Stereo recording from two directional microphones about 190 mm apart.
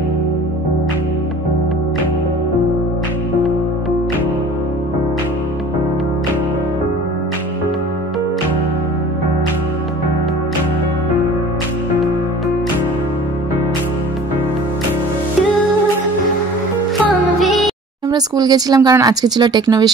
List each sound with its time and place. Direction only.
17.0 s music: centre (ahead or behind)
18.1 s speech: 20° right (ahead or behind)